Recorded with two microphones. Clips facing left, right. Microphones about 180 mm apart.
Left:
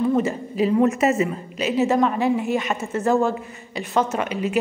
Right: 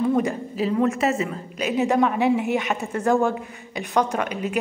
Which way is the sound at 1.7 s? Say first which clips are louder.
Left 1 dB; centre (ahead or behind).